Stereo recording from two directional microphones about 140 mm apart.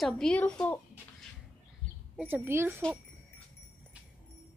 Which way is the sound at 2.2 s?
15° right (ahead or behind).